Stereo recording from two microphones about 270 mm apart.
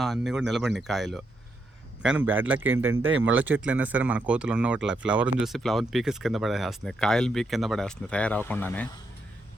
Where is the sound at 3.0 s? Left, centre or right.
Right.